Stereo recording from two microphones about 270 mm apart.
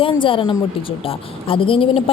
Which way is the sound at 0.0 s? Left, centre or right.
Centre.